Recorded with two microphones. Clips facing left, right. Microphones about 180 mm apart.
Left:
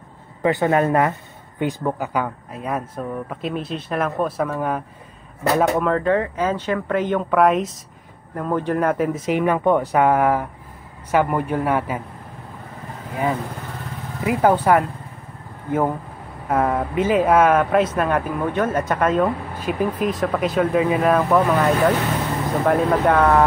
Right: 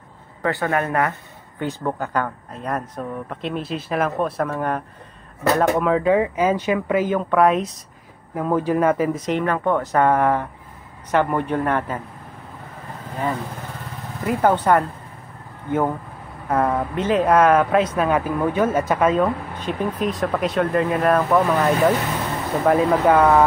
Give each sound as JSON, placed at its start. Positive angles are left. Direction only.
{"t": 0.4, "sound": "a man's voice", "side_deg": 20}
{"t": 1.6, "sound": "a man's voice", "side_deg": 10}
{"t": 14.2, "sound": "a man's voice", "side_deg": 10}
{"t": 16.4, "sound": "speech", "side_deg": 5}